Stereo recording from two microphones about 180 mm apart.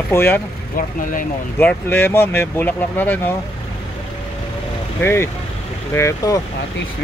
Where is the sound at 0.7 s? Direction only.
50° left (ahead or behind).